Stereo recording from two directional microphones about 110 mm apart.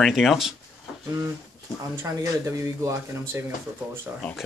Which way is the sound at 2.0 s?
25° right (ahead or behind).